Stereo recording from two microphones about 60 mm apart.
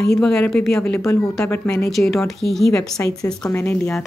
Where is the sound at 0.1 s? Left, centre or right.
Centre.